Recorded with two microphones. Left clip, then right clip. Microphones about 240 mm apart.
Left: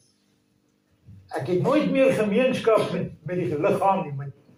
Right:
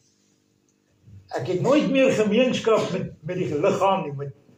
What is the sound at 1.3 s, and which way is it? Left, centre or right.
A man's voice, right.